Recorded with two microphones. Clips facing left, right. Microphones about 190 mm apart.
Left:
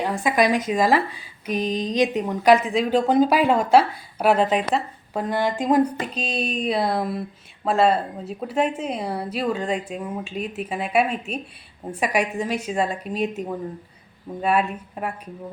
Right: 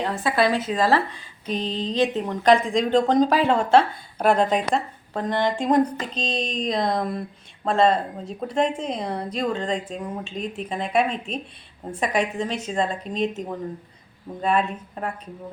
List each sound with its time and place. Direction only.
0.0 s speech: 15° left (ahead or behind)